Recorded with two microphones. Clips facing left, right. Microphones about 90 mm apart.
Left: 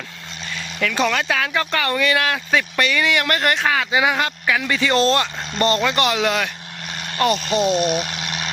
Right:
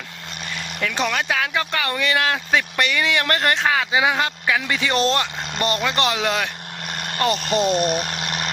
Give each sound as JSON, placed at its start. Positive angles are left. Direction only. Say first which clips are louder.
{"t": 0.5, "sound": "speech", "louder": "left 3 dB", "side_deg": -20}
{"t": 6.9, "sound": "vehicle", "louder": "right 2 dB", "side_deg": -50}
{"t": 7.3, "sound": "speech", "louder": "left 1 dB", "side_deg": 0}
{"t": 7.7, "sound": "a sound", "louder": "left 1 dB", "side_deg": -45}